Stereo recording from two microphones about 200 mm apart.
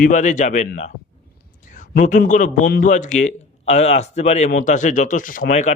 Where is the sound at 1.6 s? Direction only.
40° left (ahead or behind).